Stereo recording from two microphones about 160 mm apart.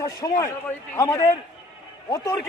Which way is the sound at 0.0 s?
20° left (ahead or behind).